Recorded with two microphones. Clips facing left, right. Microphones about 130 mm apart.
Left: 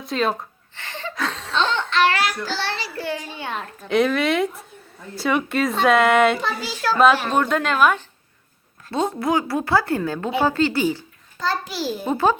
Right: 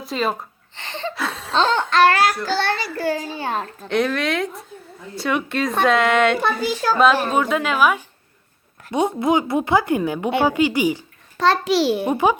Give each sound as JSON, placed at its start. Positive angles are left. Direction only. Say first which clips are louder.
{"t": 0.0, "sound": "a woman's voice", "louder": "even", "side_deg": 0}
{"t": 0.8, "sound": "a sound", "louder": "right 4 dB", "side_deg": -25}
{"t": 1.1, "sound": "chuckle", "louder": "even", "side_deg": -10}
{"t": 1.5, "sound": "a sound", "louder": "right 4 dB", "side_deg": -40}
{"t": 2.6, "sound": "a child's voice", "louder": "right 5 dB", "side_deg": -50}
{"t": 3.8, "sound": "a woman's voice", "louder": "left 2 dB", "side_deg": 0}
{"t": 6.4, "sound": "a child's voice", "louder": "right 6 dB", "side_deg": -55}
{"t": 7.3, "sound": "a woman's voice", "louder": "even", "side_deg": -5}
{"t": 8.9, "sound": "a woman's voice", "louder": "right 3 dB", "side_deg": -20}
{"t": 11.3, "sound": "a child's voice", "louder": "right 8 dB", "side_deg": -75}
{"t": 12.0, "sound": "a woman's voice", "louder": "right 1 dB", "side_deg": -15}